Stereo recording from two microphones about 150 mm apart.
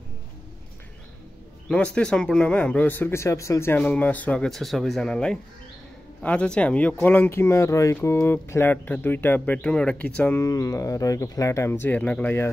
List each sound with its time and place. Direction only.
1.7 s speech: 5° left (ahead or behind)
10.4 s speech: 25° left (ahead or behind)